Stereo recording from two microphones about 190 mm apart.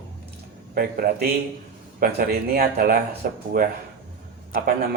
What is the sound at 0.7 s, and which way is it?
Speech, 50° right (ahead or behind).